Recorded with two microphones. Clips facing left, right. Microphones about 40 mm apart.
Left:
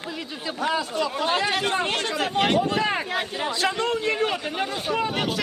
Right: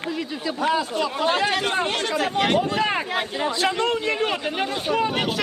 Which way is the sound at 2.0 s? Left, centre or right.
Right.